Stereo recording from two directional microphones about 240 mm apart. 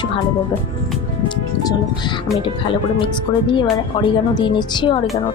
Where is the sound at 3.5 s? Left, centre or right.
Centre.